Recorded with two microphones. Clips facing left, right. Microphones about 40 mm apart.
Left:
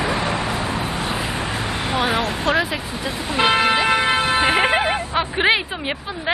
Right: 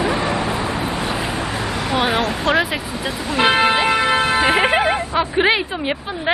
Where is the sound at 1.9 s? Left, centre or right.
Centre.